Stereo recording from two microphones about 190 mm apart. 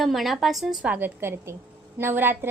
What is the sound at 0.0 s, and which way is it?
A woman's voice, centre (ahead or behind).